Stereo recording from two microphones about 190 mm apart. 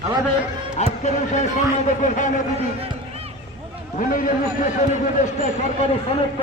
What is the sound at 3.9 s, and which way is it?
A man's voice, 45° left (ahead or behind).